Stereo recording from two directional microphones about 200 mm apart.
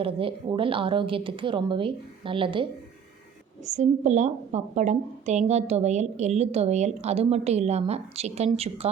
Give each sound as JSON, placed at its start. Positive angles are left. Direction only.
{"t": 0.0, "sound": "a woman's voice", "side_deg": -25}
{"t": 3.7, "sound": "a woman's voice", "side_deg": -35}